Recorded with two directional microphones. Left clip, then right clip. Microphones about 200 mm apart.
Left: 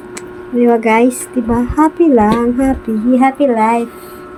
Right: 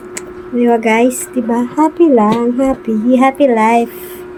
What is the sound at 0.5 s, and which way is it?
Speech, centre (ahead or behind).